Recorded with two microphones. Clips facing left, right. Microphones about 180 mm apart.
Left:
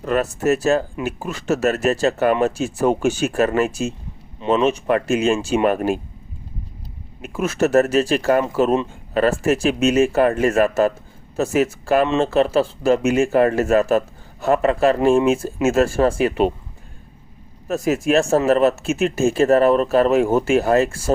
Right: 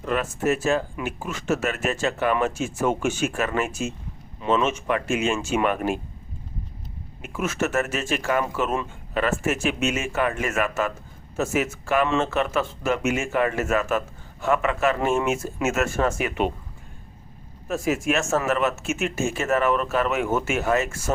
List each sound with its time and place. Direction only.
0.0 s speech: 40° left (ahead or behind)
7.2 s speech: 35° left (ahead or behind)
17.7 s speech: 40° left (ahead or behind)